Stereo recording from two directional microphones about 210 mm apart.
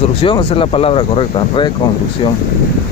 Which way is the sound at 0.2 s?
25° left (ahead or behind).